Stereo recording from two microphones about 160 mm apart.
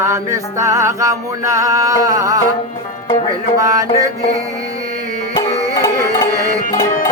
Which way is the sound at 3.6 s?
20° right (ahead or behind).